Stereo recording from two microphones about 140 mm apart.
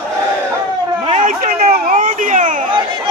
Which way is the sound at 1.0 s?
65° right (ahead or behind).